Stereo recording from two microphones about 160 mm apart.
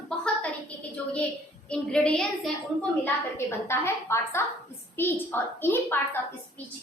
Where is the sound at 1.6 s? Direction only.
5° left (ahead or behind).